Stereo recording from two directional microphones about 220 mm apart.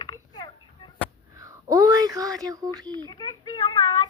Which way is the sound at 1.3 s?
15° right (ahead or behind).